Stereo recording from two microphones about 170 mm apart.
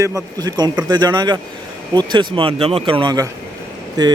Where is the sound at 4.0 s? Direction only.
20° right (ahead or behind).